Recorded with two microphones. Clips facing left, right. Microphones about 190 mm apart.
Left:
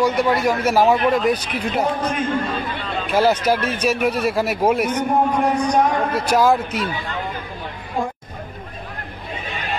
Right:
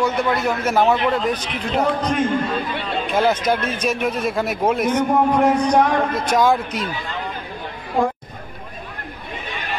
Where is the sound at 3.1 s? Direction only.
10° left (ahead or behind).